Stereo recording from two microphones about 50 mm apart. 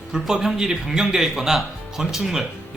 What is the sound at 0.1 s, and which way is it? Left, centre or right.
Speech, centre.